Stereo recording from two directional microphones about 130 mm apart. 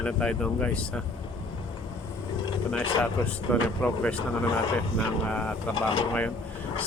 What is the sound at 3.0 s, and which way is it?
Speech, 10° left (ahead or behind).